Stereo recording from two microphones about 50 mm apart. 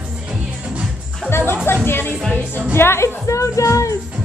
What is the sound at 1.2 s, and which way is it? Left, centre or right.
Music, left.